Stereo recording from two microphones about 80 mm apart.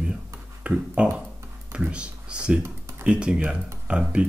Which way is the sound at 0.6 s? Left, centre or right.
Centre.